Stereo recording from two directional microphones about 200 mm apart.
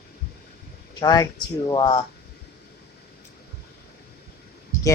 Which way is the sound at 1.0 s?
20° left (ahead or behind).